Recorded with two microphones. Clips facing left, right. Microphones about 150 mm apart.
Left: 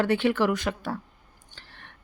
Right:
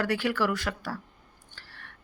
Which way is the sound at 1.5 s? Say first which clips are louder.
Left 1 dB; 20° left (ahead or behind).